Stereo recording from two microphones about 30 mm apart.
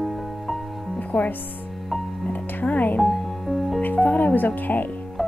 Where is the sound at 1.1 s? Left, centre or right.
Left.